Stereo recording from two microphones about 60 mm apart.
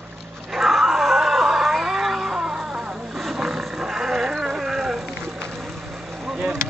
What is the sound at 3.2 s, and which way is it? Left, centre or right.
Roaring cats, centre.